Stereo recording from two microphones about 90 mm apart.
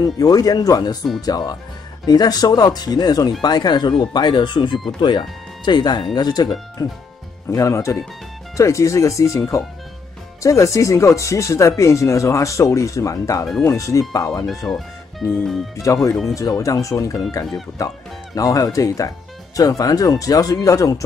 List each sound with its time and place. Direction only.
0.0 s speech: 45° left (ahead or behind)
10.4 s speech: 35° left (ahead or behind)
14.7 s speech: 15° left (ahead or behind)
15.3 s speech: 5° left (ahead or behind)
15.8 s speech: 40° left (ahead or behind)